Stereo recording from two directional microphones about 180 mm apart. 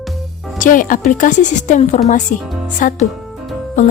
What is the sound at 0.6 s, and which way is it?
Speech, 50° left (ahead or behind).